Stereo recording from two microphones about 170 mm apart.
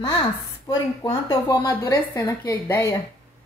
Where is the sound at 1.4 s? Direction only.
15° left (ahead or behind).